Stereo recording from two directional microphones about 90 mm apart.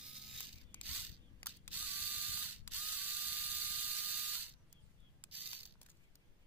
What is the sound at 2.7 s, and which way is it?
Electric toothbrush, 20° right (ahead or behind).